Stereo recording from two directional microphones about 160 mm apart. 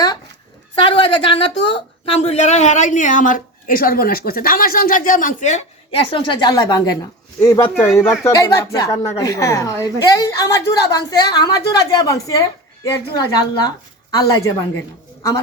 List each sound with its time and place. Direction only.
0.8 s a woman's voice: 35° left (ahead or behind)